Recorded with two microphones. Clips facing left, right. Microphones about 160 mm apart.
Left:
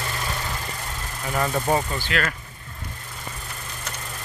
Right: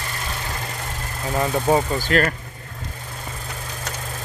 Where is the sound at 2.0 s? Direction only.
40° right (ahead or behind).